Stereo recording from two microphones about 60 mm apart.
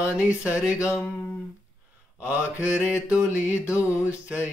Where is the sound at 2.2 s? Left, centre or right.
Right.